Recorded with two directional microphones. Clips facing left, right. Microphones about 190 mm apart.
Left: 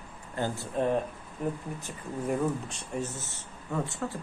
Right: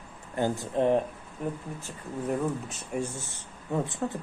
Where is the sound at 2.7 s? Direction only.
10° right (ahead or behind).